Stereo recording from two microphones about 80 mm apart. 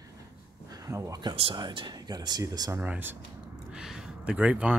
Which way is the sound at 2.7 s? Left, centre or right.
Right.